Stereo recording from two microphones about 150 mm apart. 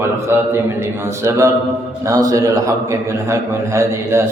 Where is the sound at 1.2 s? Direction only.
20° right (ahead or behind).